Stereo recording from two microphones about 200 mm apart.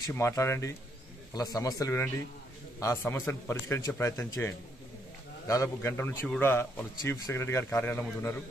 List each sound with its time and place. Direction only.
0.0 s a man's voice: 15° left (ahead or behind)